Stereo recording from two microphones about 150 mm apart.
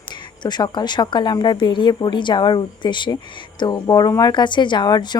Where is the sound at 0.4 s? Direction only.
30° left (ahead or behind).